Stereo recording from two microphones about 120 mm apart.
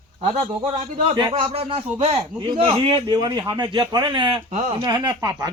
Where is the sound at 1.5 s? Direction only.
55° right (ahead or behind).